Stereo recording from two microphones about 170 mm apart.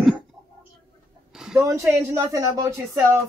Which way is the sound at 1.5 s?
20° right (ahead or behind).